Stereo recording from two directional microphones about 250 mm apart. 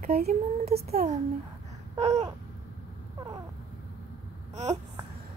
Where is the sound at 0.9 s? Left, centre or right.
Right.